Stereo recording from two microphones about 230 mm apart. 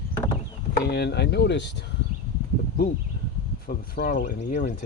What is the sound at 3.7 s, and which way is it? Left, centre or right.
Speech, left.